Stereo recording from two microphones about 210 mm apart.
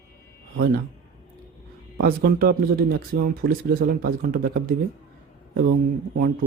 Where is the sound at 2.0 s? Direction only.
45° right (ahead or behind).